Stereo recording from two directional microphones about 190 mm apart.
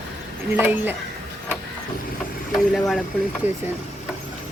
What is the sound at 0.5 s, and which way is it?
Speech, 10° right (ahead or behind).